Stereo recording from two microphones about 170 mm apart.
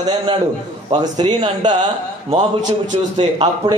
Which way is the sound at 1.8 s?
35° right (ahead or behind).